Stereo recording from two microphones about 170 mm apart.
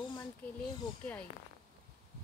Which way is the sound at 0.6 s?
5° left (ahead or behind).